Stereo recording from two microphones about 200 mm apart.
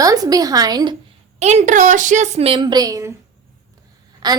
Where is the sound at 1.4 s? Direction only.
35° right (ahead or behind); by 3.1 s 15° right (ahead or behind).